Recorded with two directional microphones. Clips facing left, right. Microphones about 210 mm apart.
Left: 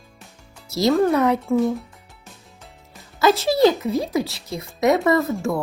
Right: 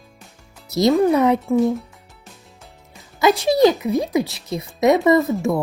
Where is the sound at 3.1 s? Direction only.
15° right (ahead or behind).